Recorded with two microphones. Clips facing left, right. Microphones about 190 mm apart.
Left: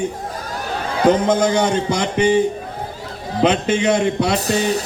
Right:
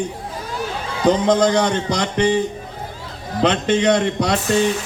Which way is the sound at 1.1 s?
5° left (ahead or behind).